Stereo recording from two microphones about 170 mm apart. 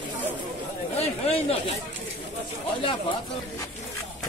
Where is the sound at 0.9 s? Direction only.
35° left (ahead or behind).